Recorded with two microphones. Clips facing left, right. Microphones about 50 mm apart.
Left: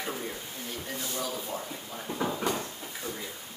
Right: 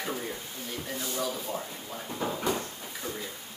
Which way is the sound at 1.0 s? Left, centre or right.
Centre.